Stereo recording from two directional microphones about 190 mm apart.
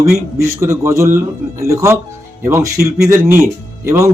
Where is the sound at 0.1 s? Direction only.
15° right (ahead or behind).